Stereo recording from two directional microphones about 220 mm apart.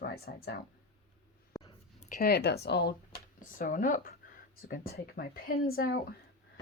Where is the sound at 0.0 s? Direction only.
45° left (ahead or behind).